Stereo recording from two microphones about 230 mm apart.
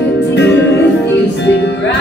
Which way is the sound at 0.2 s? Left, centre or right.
Left.